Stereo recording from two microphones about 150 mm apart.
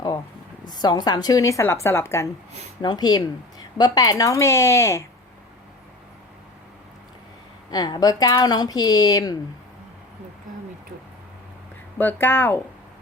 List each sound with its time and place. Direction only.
0.6 s speech: 30° left (ahead or behind)
7.7 s speech: 25° left (ahead or behind)
11.9 s speech: 15° left (ahead or behind)